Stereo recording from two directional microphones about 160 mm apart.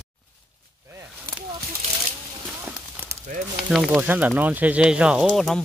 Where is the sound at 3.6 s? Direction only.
Centre (ahead or behind).